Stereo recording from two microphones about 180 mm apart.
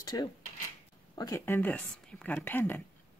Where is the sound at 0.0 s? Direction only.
20° left (ahead or behind).